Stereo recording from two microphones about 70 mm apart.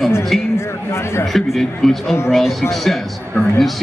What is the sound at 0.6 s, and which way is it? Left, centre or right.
Speech, left.